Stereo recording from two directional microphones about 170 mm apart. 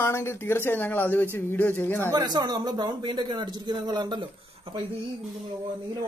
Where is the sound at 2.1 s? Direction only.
25° right (ahead or behind).